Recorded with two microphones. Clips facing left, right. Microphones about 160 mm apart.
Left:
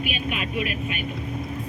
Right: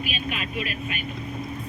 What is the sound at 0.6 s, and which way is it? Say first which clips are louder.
Speech: left 3 dB; 40° right (ahead or behind).